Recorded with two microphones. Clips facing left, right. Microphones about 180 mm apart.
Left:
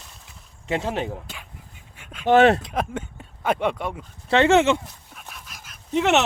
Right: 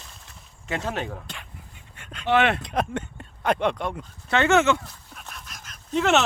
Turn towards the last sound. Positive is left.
turn(degrees=20)  # may be behind; listen again after turning